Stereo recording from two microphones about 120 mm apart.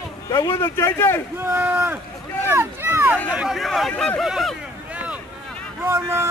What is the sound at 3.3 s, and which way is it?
Speech, 5° right (ahead or behind).